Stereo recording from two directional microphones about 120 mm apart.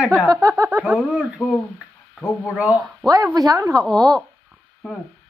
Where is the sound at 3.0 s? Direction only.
Centre (ahead or behind).